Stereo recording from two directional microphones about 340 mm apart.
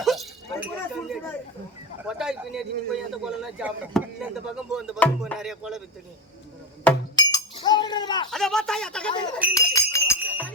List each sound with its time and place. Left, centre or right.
0.0 s a sound: centre
2.0 s a man's voice: centre
6.8 s chink: centre
8.3 s speech: centre